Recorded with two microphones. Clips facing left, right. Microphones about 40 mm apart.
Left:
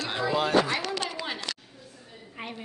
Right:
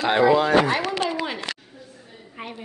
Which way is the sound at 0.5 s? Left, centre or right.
Right.